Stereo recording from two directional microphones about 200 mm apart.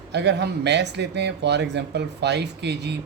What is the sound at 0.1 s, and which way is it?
Speech, 60° right (ahead or behind).